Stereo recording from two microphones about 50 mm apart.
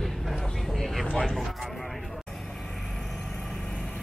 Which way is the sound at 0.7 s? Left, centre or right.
Centre.